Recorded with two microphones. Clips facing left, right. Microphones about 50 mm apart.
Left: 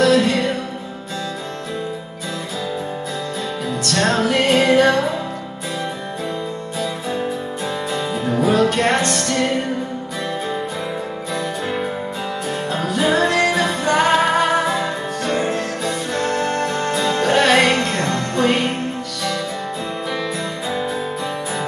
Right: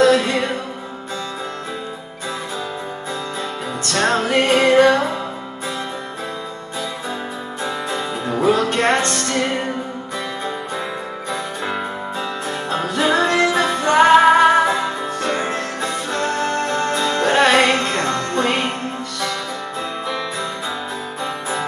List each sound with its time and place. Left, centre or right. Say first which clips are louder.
0.0 s music: even; right
4.0 s music: right 1 dB; right
8.3 s music: left 1 dB; right
12.4 s music: left 1 dB; right